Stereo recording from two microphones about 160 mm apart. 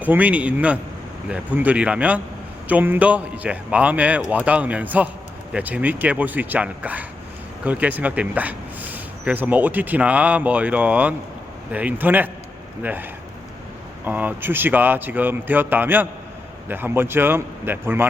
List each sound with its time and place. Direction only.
0.0 s speech: 10° right (ahead or behind)